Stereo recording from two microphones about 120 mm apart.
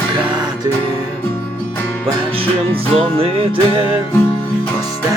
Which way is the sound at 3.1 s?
50° right (ahead or behind).